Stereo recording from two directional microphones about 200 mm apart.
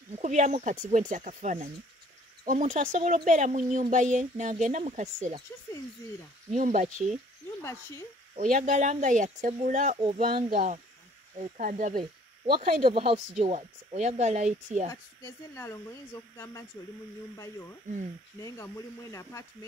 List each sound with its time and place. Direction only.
0.2 s speech: 35° right (ahead or behind)
6.5 s speech: 40° right (ahead or behind)
8.4 s speech: 40° right (ahead or behind)
12.0 s speech: 25° right (ahead or behind)
14.9 s speech: 15° left (ahead or behind)
18.4 s speech: 15° left (ahead or behind)